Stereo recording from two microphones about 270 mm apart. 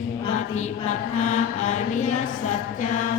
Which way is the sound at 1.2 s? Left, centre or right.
Left.